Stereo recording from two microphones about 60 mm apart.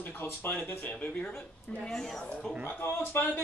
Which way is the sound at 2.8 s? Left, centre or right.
Left.